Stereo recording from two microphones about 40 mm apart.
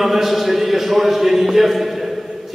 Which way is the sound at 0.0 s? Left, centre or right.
Centre.